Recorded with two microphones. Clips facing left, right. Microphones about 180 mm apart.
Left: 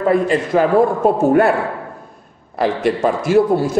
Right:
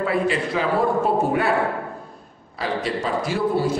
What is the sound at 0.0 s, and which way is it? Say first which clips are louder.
Speech: left 6 dB; 45° left (ahead or behind).